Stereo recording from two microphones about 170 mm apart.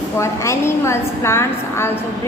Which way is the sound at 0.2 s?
15° left (ahead or behind).